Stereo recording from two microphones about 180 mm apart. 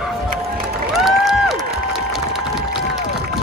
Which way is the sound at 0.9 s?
Centre (ahead or behind).